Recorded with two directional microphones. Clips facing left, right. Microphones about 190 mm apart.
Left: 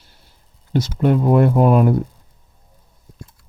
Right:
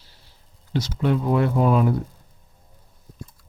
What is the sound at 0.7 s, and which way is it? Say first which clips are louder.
Speech: left 5 dB; 50° left (ahead or behind).